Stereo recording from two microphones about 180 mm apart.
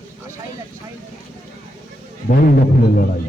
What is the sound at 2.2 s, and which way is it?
Speech, 50° left (ahead or behind).